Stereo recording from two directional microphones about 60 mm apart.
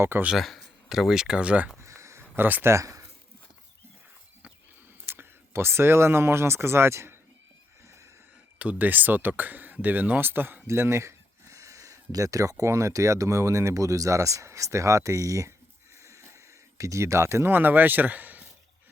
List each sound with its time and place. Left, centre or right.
0.3 s speech: centre
1.8 s a sound: right
2.3 s speech: right
2.7 s a sound: right
5.1 s speech: right
7.9 s neigh: right
8.5 s speech: right
10.7 s speech: right
16.0 s a sound: right
17.5 s speech: right